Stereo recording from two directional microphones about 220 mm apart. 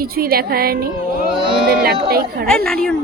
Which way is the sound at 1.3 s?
25° right (ahead or behind).